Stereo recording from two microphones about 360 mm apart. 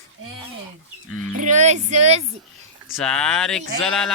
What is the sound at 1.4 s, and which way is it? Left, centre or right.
Speech, centre.